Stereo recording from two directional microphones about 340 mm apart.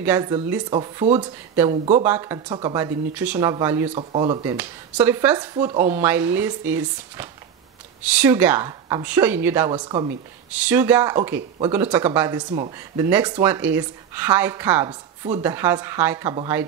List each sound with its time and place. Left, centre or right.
0.0 s speech: centre
2.0 s speech: centre